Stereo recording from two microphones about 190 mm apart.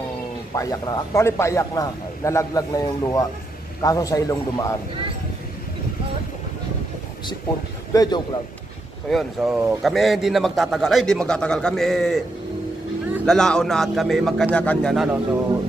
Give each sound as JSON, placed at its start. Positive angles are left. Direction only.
{"t": 0.6, "sound": "a man's voice", "side_deg": 20}
{"t": 7.9, "sound": "a man's voice", "side_deg": 20}
{"t": 9.1, "sound": "a man's voice", "side_deg": 0}
{"t": 13.2, "sound": "a man's voice", "side_deg": 5}